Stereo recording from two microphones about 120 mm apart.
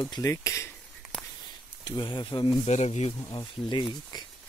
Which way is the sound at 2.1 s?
40° left (ahead or behind).